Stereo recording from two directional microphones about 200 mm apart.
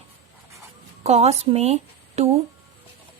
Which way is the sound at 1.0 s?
30° right (ahead or behind).